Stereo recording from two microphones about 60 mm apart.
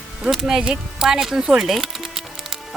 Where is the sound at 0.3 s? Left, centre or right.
Centre.